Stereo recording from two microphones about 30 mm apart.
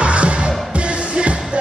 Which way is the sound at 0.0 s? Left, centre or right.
Right.